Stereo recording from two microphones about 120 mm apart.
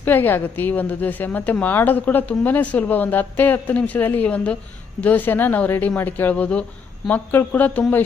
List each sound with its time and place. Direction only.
0.0 s a woman's voice: 15° left (ahead or behind)